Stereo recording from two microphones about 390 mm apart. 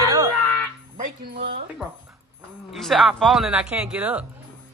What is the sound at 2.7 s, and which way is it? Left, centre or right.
Speech, centre.